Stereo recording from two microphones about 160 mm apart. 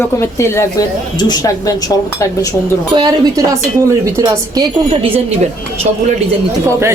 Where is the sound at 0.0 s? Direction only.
15° left (ahead or behind).